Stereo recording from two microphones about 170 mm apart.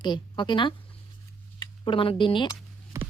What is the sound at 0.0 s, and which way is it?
Speech, 25° left (ahead or behind).